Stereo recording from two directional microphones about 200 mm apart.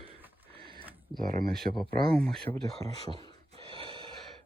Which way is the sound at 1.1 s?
45° right (ahead or behind).